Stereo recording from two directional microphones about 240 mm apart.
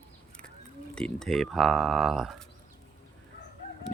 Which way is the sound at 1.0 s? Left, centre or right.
Centre.